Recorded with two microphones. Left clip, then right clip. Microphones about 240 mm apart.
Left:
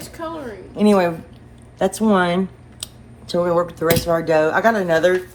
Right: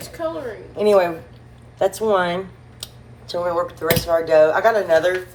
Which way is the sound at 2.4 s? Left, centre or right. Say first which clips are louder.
Left 4 dB; left.